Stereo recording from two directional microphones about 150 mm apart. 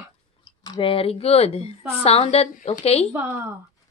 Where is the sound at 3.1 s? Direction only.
10° right (ahead or behind).